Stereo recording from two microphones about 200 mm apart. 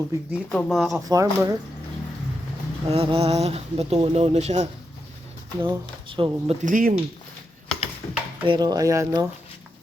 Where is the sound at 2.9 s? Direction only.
30° right (ahead or behind).